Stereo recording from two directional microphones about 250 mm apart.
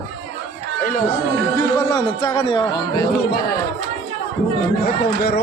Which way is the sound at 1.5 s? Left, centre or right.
Centre.